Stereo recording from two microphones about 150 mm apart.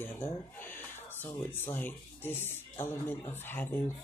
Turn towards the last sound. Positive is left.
turn(degrees=15)  # may be behind; listen again after turning